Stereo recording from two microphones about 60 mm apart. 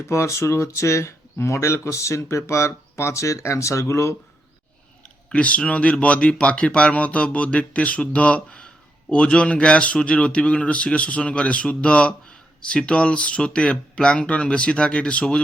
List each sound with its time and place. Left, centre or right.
0.0 s speech: left
5.3 s speech: left